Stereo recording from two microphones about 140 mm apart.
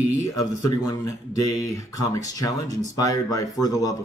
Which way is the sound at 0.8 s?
25° left (ahead or behind).